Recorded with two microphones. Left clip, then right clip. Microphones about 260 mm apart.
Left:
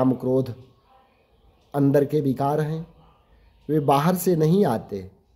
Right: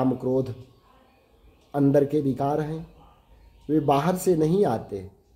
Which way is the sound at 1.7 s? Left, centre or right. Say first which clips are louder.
Left 1 dB; left.